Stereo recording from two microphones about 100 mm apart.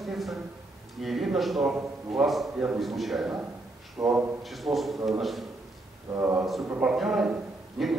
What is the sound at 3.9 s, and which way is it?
Speech, 35° right (ahead or behind).